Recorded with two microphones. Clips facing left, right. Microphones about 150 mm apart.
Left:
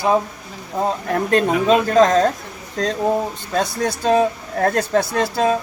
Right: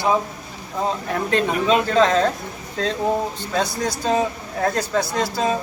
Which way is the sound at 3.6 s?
55° left (ahead or behind).